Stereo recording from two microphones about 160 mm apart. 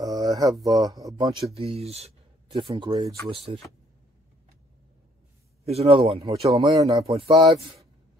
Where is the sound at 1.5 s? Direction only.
40° right (ahead or behind).